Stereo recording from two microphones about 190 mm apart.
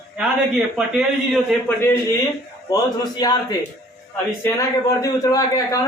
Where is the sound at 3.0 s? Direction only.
20° left (ahead or behind).